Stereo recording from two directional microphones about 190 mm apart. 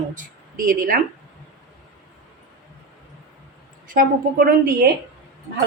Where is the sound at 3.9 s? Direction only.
50° right (ahead or behind).